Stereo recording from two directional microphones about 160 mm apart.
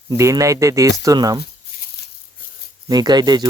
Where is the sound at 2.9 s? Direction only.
25° right (ahead or behind).